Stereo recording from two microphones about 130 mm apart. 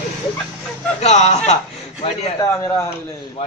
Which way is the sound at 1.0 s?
60° left (ahead or behind).